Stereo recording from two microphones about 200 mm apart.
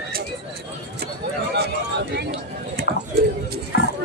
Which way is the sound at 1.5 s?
55° right (ahead or behind).